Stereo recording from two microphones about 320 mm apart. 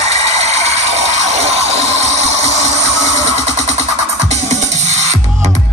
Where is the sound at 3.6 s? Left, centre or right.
Right.